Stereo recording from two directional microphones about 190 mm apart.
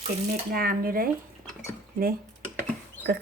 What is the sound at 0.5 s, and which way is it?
Speech, 50° right (ahead or behind).